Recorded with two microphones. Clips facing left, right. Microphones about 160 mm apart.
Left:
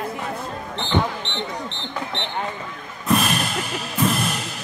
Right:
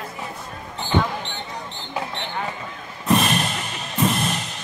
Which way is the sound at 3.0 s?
Centre (ahead or behind).